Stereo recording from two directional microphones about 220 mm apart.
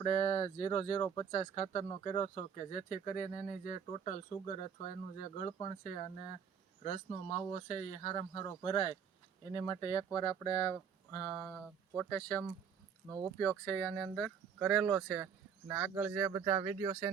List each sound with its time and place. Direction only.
0.0 s speech: 25° left (ahead or behind)
1.3 s speech: 30° left (ahead or behind)
7.1 s speech: 25° left (ahead or behind); by 17.1 s 15° right (ahead or behind)